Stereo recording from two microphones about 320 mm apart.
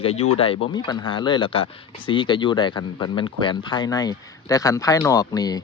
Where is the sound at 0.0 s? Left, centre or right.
Centre.